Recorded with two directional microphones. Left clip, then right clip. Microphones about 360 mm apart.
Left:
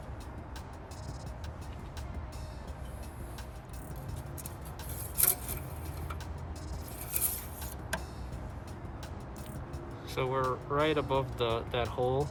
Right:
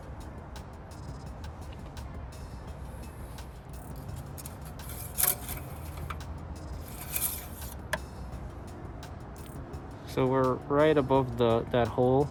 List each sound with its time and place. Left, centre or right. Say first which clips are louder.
10.2 s speech: right 5 dB; right